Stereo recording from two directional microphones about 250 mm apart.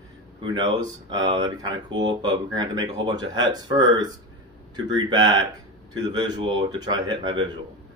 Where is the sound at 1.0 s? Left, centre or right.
Centre.